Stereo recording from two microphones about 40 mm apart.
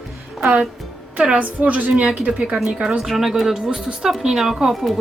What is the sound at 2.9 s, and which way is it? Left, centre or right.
Speech, centre.